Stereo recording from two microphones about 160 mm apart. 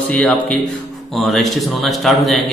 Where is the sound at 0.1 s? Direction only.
10° left (ahead or behind).